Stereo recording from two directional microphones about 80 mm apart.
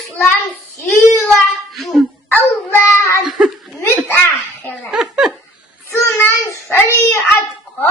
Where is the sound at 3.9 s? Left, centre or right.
Left.